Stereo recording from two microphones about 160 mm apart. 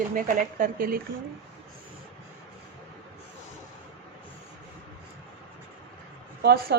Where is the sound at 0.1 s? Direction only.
55° right (ahead or behind).